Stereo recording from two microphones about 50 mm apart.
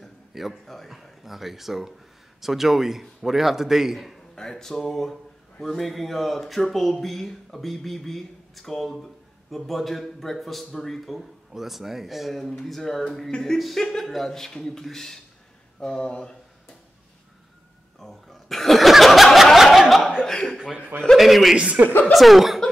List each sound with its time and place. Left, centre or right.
0.3 s speech: centre
4.4 s speech: centre
17.9 s chuckle: centre
21.2 s speech: centre
21.5 s speech: right
22.1 s speech: centre